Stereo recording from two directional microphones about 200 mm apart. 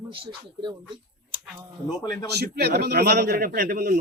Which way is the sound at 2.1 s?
55° right (ahead or behind).